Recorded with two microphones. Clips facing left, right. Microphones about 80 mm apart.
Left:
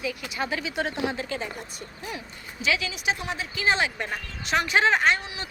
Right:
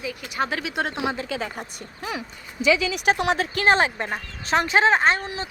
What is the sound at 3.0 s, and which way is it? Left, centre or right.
Speech, right.